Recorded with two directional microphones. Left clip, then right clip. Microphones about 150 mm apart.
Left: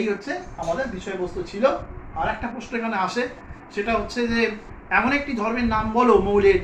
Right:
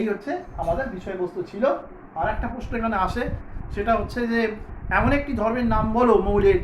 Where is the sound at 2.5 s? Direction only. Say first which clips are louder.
Right 1 dB; 25° right (ahead or behind).